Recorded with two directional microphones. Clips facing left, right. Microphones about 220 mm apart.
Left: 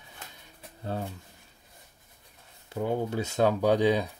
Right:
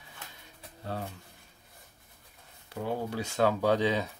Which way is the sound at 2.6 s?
20° left (ahead or behind).